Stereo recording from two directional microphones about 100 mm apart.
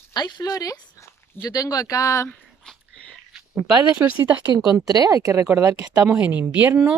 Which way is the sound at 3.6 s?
15° right (ahead or behind).